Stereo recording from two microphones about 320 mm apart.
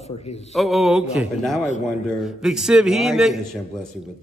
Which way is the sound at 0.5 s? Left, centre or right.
Centre.